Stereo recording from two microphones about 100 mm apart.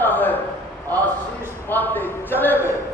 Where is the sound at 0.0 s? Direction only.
20° left (ahead or behind).